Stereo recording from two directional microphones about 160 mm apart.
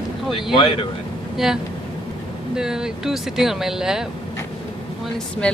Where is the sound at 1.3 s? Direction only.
Centre (ahead or behind).